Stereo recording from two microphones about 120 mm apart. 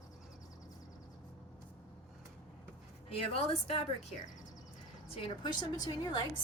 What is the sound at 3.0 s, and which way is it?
A woman's voice, 55° left (ahead or behind).